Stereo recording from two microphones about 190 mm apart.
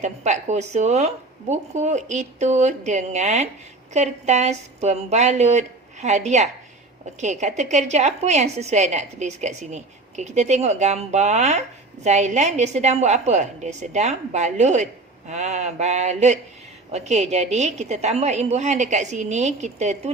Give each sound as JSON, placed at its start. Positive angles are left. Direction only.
{"t": 0.0, "sound": "a woman's voice", "side_deg": -40}